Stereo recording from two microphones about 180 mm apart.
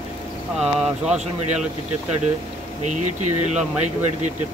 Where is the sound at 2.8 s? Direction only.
40° right (ahead or behind).